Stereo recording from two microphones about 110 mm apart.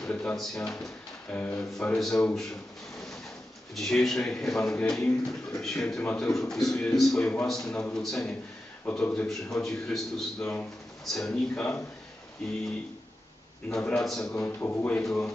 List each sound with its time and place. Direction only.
0.0 s speech: 10° left (ahead or behind)
3.7 s speech: 5° left (ahead or behind)
10.4 s speech: 15° left (ahead or behind)
13.7 s speech: 5° left (ahead or behind)
14.4 s a man's voice: 20° left (ahead or behind)
15.0 s speech: 5° left (ahead or behind)